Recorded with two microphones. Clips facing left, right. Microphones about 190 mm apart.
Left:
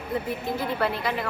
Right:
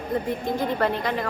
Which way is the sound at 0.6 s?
40° right (ahead or behind).